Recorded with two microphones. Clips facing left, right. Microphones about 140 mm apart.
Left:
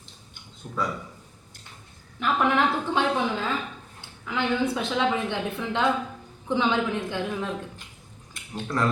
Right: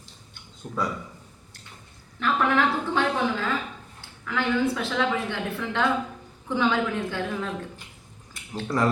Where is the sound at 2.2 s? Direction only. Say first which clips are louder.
Even; 15° left (ahead or behind).